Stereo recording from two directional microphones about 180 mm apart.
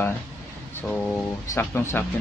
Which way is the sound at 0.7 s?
10° left (ahead or behind).